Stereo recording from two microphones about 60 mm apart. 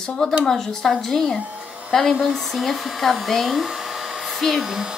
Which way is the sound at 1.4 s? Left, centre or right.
Right.